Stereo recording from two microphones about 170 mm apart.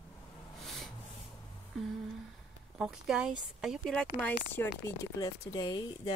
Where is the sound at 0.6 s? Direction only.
Centre (ahead or behind).